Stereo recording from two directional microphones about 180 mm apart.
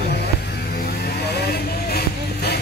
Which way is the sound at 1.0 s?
60° left (ahead or behind).